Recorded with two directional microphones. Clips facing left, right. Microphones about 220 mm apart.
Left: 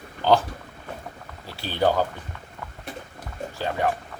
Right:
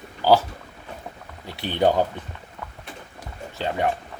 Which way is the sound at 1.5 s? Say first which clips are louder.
Right 2 dB; 20° right (ahead or behind).